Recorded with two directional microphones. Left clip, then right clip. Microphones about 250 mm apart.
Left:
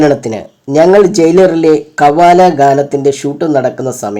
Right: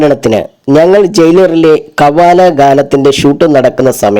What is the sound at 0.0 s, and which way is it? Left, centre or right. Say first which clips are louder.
Speech: right 3 dB; right.